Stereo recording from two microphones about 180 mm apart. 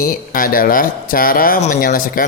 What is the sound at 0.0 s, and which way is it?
Speech, 50° left (ahead or behind).